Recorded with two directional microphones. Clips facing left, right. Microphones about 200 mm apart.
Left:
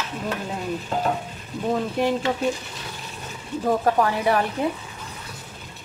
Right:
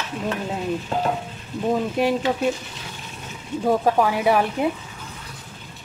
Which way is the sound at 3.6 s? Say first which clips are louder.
Right 2 dB; 10° right (ahead or behind).